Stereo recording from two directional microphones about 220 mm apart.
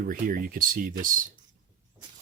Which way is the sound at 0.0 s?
40° right (ahead or behind).